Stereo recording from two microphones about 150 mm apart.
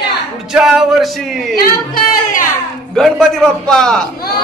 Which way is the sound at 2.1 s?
65° left (ahead or behind).